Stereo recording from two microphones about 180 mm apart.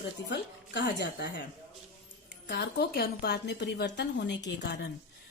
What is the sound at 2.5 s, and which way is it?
A woman's voice, 65° left (ahead or behind).